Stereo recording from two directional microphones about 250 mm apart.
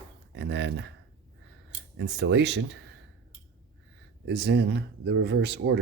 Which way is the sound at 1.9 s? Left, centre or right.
Right.